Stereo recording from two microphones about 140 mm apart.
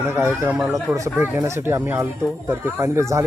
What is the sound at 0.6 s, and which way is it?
Speech, centre (ahead or behind).